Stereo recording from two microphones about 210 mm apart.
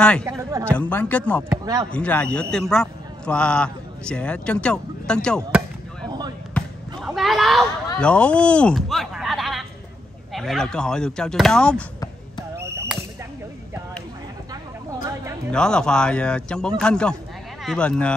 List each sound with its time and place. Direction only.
0.2 s speech: 15° right (ahead or behind)
0.7 s speech: 5° left (ahead or behind)
1.5 s speech: 15° right (ahead or behind)
1.9 s a man's voice: 5° left (ahead or behind)
6.5 s basketball bounce: centre (ahead or behind)
10.3 s a man's voice: centre (ahead or behind)
12.9 s whip: centre (ahead or behind)
15.5 s a man's voice: 5° left (ahead or behind)